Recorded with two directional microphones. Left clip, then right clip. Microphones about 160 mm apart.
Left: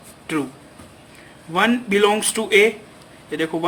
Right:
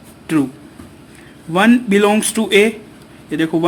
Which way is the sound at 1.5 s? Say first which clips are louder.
Right 5 dB; 30° right (ahead or behind).